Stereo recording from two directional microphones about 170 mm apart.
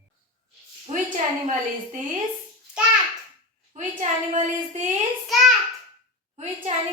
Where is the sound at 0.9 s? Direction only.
40° right (ahead or behind).